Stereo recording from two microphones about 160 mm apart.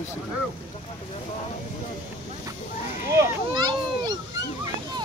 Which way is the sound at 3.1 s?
20° right (ahead or behind).